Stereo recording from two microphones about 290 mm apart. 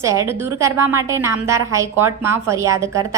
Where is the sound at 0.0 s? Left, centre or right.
Centre.